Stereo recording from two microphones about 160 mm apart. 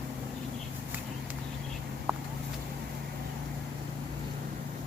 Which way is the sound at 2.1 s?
15° right (ahead or behind).